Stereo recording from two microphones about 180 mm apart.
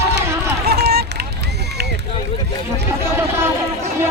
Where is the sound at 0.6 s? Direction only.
65° right (ahead or behind).